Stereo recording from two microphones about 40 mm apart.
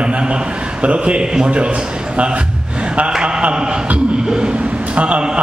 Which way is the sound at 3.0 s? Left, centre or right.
Right.